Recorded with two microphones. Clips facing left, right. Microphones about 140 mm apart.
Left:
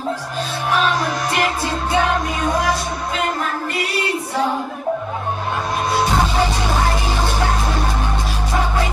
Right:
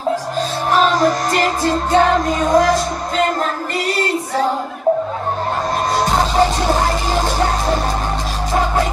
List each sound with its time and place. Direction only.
0.7 s music: 45° right (ahead or behind)